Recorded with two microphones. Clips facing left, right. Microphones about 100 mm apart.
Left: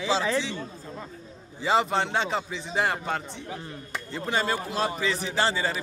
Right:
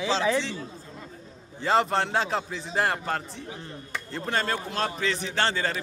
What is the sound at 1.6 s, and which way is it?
A man's voice, centre (ahead or behind).